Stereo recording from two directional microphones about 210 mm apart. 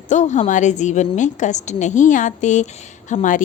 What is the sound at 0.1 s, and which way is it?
A woman's voice, 35° left (ahead or behind).